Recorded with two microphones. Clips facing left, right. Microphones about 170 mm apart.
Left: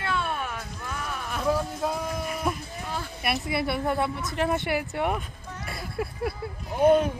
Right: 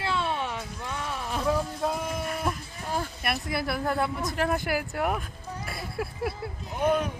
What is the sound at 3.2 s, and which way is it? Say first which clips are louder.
Speech: left 5 dB; centre (ahead or behind).